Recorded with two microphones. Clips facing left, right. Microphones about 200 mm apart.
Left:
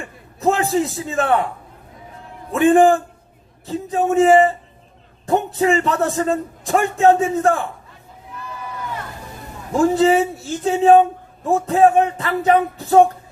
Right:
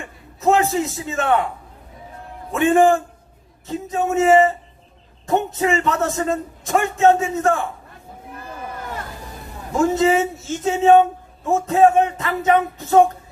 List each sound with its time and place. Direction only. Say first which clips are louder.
0.3 s a man's voice: even; 35° left (ahead or behind)
2.5 s a man's voice: left 2 dB; 35° left (ahead or behind)
8.4 s a sound: even; 50° right (ahead or behind)
9.8 s a man's voice: left 2 dB; 35° left (ahead or behind)